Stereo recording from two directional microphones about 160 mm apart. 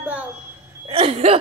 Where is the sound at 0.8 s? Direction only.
35° right (ahead or behind).